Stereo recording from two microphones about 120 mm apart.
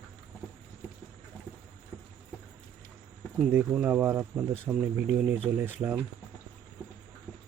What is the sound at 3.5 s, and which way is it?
Speech, 15° right (ahead or behind).